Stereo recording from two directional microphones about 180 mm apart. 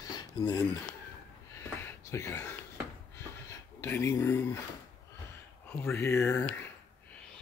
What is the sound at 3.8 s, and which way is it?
Speech, 15° left (ahead or behind).